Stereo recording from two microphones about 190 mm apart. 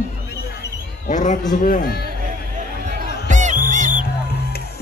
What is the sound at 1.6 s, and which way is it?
Speech, 50° left (ahead or behind).